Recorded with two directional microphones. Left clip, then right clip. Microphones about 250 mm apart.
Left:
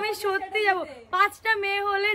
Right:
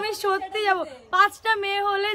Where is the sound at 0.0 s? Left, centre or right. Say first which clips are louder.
Right 2 dB; centre.